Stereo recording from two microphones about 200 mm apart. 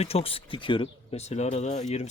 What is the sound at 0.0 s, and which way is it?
Speech, 30° left (ahead or behind).